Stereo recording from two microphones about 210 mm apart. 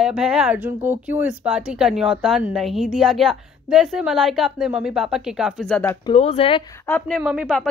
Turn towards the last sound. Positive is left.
turn(degrees=0)  # may be behind; listen again after turning